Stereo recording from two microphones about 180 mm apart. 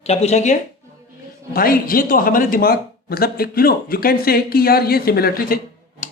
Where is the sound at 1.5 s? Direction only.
55° left (ahead or behind).